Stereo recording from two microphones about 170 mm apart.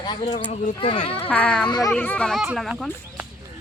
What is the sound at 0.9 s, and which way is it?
Speech, 30° left (ahead or behind).